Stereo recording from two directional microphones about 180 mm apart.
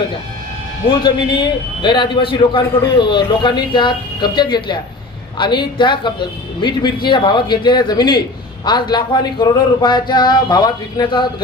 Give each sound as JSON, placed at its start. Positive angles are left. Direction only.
{"t": 0.9, "sound": "speech", "side_deg": 25}